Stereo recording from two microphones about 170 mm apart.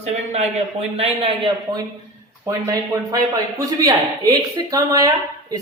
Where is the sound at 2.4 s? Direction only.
20° right (ahead or behind).